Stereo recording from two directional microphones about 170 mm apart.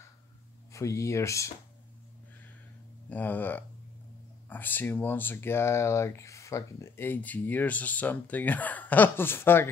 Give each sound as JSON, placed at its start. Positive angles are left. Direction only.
{"t": 0.7, "sound": "speech", "side_deg": 20}
{"t": 3.1, "sound": "speech", "side_deg": 10}